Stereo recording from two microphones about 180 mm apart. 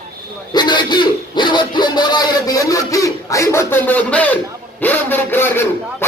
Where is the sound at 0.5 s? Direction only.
25° left (ahead or behind).